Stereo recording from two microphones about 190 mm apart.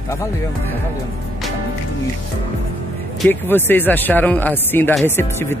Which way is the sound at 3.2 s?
10° left (ahead or behind).